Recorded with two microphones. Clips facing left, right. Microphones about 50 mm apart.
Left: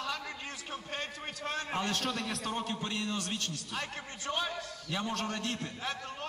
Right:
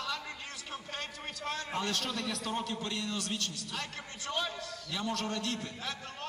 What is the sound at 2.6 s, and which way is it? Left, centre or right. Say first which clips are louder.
A man's voice: left 1 dB; left.